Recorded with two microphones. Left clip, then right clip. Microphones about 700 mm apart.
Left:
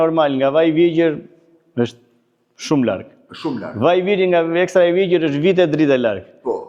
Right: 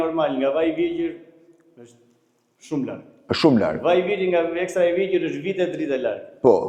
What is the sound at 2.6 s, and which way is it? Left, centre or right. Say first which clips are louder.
Speech: left 10 dB; left.